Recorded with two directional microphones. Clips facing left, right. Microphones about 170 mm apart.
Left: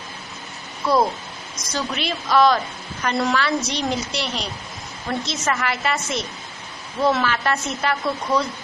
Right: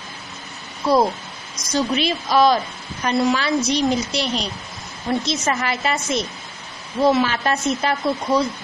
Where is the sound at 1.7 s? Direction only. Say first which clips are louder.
Right 6 dB; 15° right (ahead or behind).